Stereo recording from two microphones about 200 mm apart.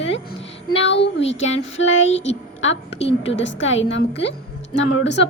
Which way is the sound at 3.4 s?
65° left (ahead or behind).